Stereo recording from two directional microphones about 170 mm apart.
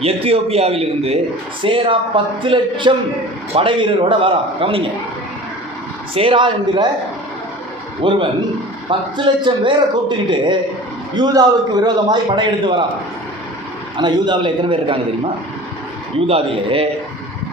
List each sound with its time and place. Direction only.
0.0 s a man's voice: 35° right (ahead or behind)
6.1 s a man's voice: 30° right (ahead or behind)
8.0 s a man's voice: 30° right (ahead or behind)
13.9 s a man's voice: 30° right (ahead or behind)
16.2 s a man's voice: 35° right (ahead or behind)